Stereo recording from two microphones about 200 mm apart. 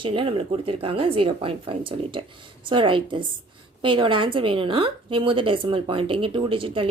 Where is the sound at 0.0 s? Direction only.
25° right (ahead or behind).